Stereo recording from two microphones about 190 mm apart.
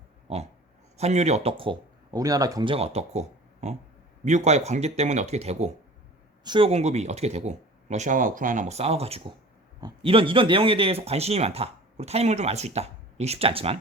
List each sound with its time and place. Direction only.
0.3 s pig: 35° right (ahead or behind)
0.9 s speech: 35° right (ahead or behind)